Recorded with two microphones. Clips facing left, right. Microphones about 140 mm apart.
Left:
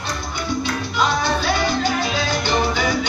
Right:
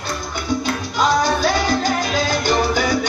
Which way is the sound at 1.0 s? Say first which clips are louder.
Right 4 dB; 40° right (ahead or behind).